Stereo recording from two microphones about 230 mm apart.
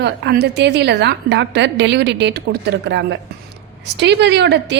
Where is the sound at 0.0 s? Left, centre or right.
Right.